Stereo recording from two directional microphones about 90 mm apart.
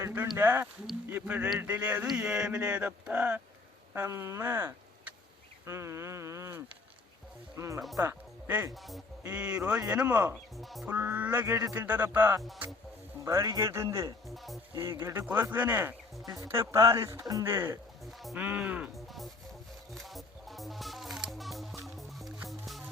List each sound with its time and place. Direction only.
0.0 s speech: 25° right (ahead or behind)
3.9 s speech: 30° right (ahead or behind)
9.2 s speech: 15° right (ahead or behind)
10.6 s speech: centre (ahead or behind)
10.8 s speech: 20° right (ahead or behind)
13.2 s speech: 40° right (ahead or behind)
14.3 s speech: centre (ahead or behind)
14.8 s speech: 30° right (ahead or behind)
16.2 s speech: 40° right (ahead or behind)
18.0 s speech: centre (ahead or behind)
18.3 s speech: 15° right (ahead or behind)
18.9 s speech: centre (ahead or behind)
19.9 s music: centre (ahead or behind)